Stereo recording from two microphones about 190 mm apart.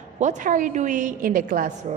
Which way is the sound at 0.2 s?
40° right (ahead or behind).